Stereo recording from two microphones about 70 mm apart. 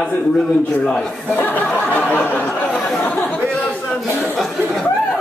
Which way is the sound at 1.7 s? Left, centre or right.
Centre.